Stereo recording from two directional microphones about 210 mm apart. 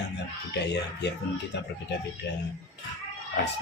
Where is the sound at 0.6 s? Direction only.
55° left (ahead or behind).